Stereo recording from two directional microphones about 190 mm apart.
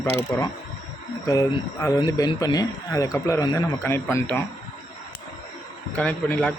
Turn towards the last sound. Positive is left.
turn(degrees=5)  # may be behind; listen again after turning